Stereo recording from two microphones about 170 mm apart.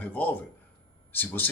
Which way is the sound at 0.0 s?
10° left (ahead or behind).